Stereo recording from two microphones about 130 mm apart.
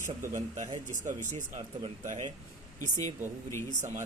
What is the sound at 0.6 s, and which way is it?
Speech, 65° right (ahead or behind).